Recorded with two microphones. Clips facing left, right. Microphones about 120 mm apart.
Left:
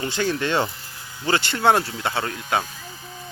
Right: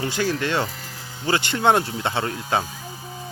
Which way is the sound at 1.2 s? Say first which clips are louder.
Even; 15° right (ahead or behind).